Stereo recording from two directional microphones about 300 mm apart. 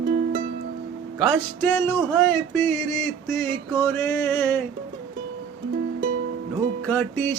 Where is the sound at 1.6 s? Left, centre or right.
Centre.